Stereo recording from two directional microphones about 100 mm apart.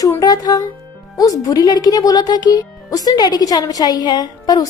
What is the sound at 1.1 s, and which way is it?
Speech, 35° left (ahead or behind).